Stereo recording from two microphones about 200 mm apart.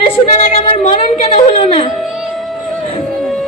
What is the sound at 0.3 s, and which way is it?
Speech, 35° left (ahead or behind).